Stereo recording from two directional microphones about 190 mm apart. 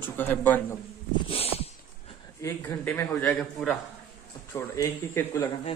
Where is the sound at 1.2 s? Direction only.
30° left (ahead or behind).